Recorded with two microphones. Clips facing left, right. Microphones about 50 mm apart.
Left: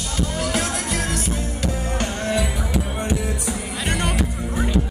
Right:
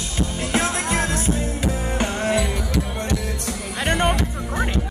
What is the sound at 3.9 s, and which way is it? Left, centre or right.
Music, right.